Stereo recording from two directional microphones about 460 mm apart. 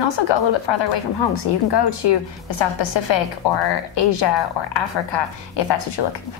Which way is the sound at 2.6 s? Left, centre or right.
Left.